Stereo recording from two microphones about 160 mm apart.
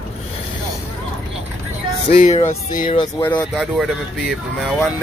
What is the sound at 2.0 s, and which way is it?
Speech, 50° left (ahead or behind).